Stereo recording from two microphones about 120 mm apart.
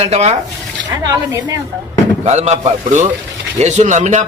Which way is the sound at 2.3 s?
70° right (ahead or behind).